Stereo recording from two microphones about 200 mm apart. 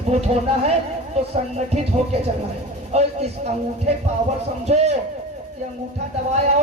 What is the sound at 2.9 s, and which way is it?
Speech, 35° right (ahead or behind).